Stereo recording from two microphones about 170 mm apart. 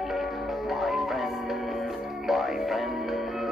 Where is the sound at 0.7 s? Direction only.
Centre (ahead or behind).